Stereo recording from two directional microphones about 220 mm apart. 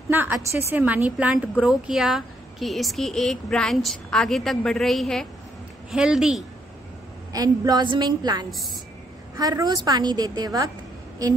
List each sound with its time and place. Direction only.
0.1 s a woman's voice: 10° right (ahead or behind)
7.3 s a woman's voice: 15° right (ahead or behind)